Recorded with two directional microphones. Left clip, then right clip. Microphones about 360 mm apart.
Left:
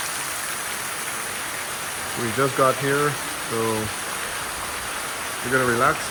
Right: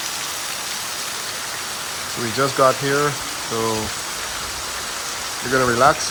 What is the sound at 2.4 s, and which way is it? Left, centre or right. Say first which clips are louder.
Speech: right 3 dB; centre.